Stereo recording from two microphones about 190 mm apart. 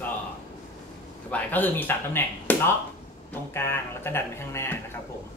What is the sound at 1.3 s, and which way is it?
Speech, 10° left (ahead or behind).